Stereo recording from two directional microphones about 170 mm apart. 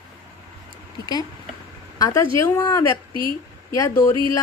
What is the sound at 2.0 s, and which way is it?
Speech, 20° left (ahead or behind).